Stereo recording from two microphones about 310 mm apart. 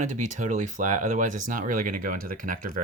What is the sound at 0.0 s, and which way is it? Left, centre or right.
Speech, right.